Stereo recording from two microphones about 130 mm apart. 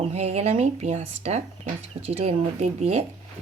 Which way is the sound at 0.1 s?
55° right (ahead or behind).